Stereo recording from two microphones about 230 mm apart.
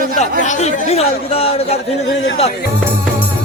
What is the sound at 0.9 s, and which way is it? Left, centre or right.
Speech, left.